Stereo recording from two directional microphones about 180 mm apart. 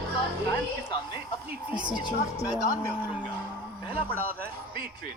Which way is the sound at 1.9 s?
25° left (ahead or behind).